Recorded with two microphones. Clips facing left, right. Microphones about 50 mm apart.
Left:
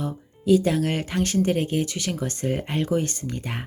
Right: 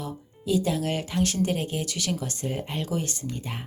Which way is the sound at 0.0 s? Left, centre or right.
Left.